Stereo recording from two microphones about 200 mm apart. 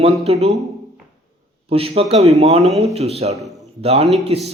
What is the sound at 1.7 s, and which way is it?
A man's voice, 30° right (ahead or behind).